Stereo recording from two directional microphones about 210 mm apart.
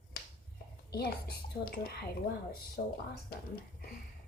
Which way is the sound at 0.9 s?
50° left (ahead or behind).